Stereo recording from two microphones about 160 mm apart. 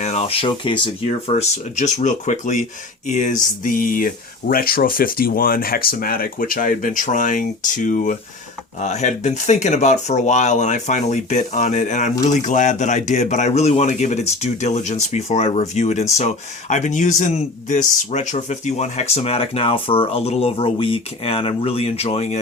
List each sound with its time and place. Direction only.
0.0 s speech: 40° left (ahead or behind)
1.3 s a man's voice: 45° left (ahead or behind)